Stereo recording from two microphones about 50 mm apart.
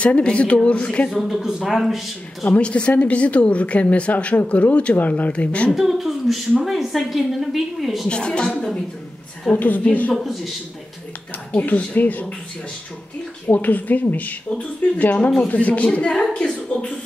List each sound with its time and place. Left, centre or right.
0.0 s speech: left
1.2 s a woman's voice: centre
2.4 s speech: left
5.7 s a woman's voice: centre
8.1 s speech: centre
9.6 s speech: left
10.1 s a woman's voice: centre
11.5 s speech: left
13.5 s speech: left